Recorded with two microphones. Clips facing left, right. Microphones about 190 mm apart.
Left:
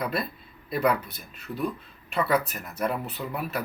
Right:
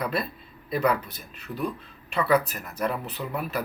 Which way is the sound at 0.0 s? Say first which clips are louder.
Right 1 dB; centre (ahead or behind).